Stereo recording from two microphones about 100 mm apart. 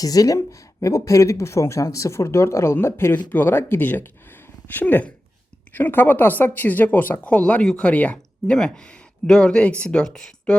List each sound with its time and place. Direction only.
0.0 s speech: 35° left (ahead or behind); by 10.6 s 10° left (ahead or behind)